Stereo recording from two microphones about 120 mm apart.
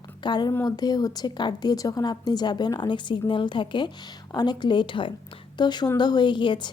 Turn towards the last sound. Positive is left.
turn(degrees=40)  # may be behind; listen again after turning